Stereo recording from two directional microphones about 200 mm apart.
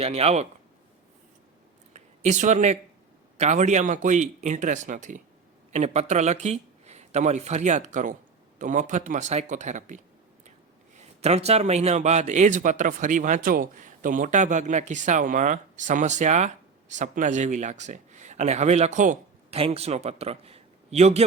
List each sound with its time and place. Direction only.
0.0 s a man's voice: 30° right (ahead or behind)
1.9 s a sound: 35° right (ahead or behind)
3.3 s a man's voice: 35° right (ahead or behind)